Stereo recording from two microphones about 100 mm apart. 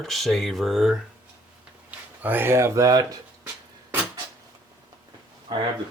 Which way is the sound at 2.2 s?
20° right (ahead or behind).